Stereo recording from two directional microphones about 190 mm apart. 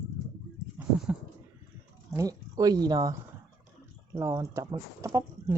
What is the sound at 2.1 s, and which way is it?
Speech, 20° right (ahead or behind).